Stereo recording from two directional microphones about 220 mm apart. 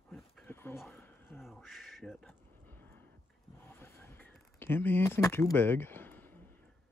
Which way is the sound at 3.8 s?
10° left (ahead or behind).